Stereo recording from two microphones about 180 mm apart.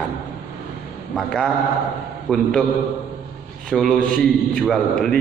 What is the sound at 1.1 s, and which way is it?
Speech, 5° left (ahead or behind).